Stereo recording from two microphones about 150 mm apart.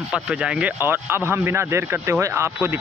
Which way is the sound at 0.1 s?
5° right (ahead or behind).